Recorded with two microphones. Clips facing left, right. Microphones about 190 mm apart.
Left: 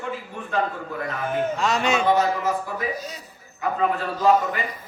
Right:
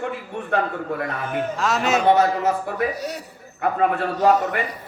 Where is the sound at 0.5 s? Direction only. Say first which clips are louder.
Right 2 dB; 65° right (ahead or behind).